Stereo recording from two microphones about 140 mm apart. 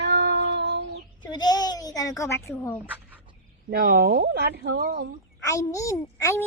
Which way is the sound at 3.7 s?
90° right.